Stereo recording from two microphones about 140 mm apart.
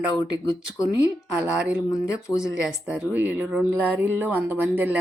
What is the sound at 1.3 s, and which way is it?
A woman's voice, 10° right (ahead or behind).